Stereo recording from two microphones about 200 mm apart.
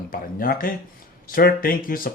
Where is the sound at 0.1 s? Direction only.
45° left (ahead or behind).